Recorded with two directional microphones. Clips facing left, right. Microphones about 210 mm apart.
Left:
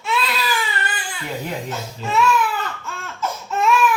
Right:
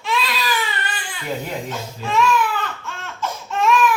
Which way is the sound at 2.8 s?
5° left (ahead or behind).